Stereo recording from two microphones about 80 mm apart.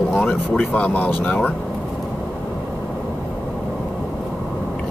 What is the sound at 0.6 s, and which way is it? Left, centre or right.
Speech, centre.